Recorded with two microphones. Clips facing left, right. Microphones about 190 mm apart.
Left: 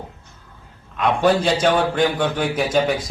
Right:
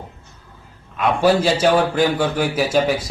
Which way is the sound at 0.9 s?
5° right (ahead or behind).